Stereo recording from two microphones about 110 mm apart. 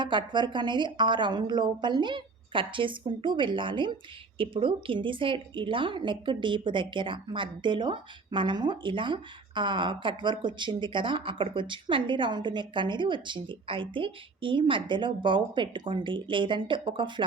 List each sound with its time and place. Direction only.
0.0 s a woman's voice: 45° right (ahead or behind)